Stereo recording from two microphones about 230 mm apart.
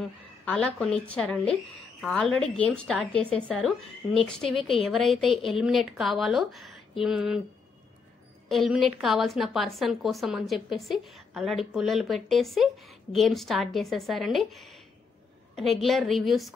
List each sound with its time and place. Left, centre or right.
0.5 s a woman's voice: centre
8.5 s a woman's voice: centre